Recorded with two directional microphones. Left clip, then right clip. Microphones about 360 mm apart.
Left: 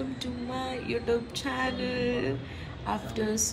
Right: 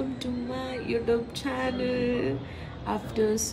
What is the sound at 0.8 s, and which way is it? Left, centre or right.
Speech, centre.